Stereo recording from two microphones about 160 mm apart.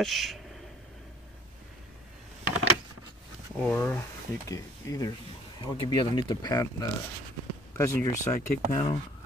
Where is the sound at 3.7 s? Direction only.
10° left (ahead or behind).